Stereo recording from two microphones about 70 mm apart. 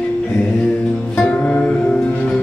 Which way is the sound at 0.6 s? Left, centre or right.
Centre.